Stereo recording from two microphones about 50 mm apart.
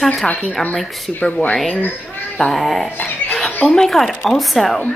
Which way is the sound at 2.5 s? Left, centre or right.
Centre.